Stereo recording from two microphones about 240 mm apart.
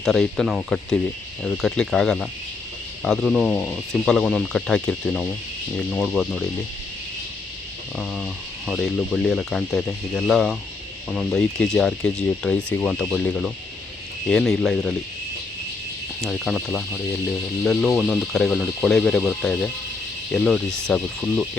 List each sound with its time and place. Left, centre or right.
0.0 s speech: centre
7.9 s speech: centre
16.2 s speech: centre